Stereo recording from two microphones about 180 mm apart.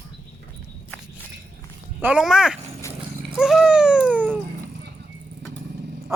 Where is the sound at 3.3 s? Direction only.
Centre (ahead or behind).